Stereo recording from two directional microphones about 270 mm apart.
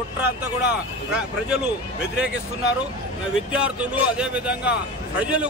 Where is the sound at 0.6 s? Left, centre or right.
Centre.